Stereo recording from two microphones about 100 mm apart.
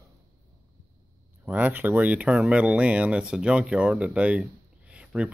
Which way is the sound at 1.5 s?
15° right (ahead or behind).